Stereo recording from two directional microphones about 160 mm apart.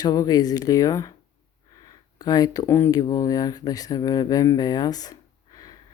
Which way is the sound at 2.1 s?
25° left (ahead or behind).